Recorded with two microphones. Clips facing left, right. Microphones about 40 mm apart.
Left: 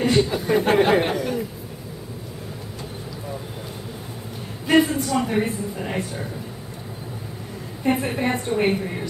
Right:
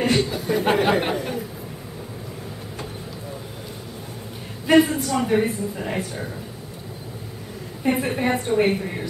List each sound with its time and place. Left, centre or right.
0.3 s a sound: centre
0.7 s speech: centre
1.1 s a woman's voice: centre
4.6 s a woman's voice: centre
7.8 s a woman's voice: centre